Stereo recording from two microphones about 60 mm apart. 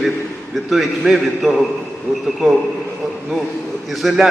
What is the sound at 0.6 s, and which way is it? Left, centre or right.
Speech, centre.